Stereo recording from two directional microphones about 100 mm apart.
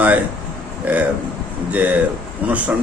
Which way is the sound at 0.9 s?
15° right (ahead or behind).